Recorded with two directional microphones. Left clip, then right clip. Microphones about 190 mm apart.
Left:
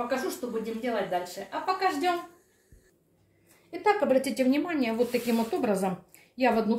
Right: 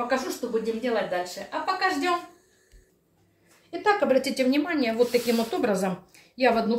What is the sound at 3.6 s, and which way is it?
A woman's voice, 5° left (ahead or behind).